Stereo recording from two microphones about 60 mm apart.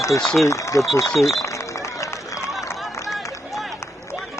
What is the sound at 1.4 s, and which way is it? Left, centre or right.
Run, left.